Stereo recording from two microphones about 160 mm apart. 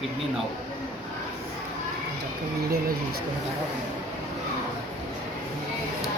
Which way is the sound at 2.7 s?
70° right (ahead or behind).